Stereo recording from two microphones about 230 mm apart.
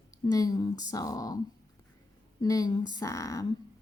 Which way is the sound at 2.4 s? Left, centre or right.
Centre.